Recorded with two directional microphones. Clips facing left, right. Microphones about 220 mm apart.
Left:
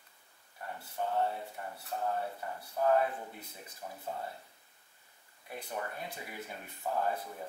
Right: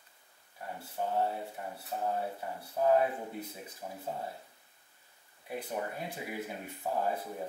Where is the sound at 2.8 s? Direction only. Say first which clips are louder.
Right 2 dB; 10° right (ahead or behind).